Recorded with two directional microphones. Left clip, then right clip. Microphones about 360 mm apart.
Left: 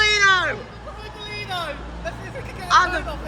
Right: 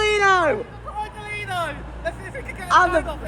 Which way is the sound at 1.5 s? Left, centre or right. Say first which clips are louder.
Right 2 dB; right.